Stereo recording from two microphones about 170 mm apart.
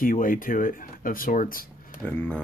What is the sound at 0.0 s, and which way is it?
Speech, 55° left (ahead or behind).